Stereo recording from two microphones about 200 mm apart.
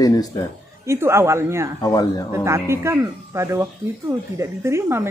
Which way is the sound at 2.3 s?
15° right (ahead or behind).